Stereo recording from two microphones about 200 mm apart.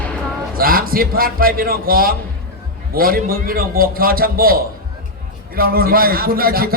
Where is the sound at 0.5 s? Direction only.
45° right (ahead or behind).